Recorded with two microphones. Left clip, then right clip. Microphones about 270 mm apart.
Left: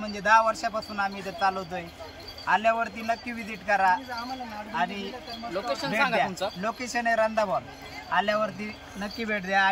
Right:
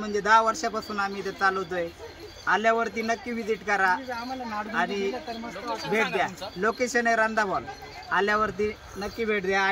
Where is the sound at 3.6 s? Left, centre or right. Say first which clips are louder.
Left 2 dB; centre.